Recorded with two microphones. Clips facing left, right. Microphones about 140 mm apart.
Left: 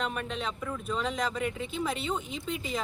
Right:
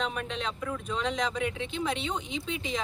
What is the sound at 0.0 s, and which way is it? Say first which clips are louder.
Speech: even; 5° left (ahead or behind).